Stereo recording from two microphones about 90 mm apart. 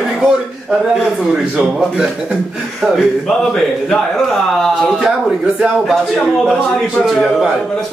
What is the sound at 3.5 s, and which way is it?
A man's voice, 5° left (ahead or behind).